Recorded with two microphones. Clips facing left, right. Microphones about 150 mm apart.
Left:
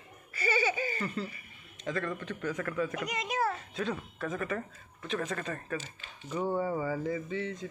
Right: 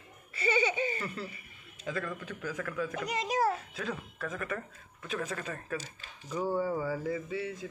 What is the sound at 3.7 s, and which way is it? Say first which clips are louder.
Speech: left 3 dB; centre (ahead or behind).